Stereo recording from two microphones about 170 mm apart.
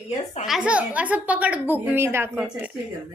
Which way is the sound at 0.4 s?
5° right (ahead or behind).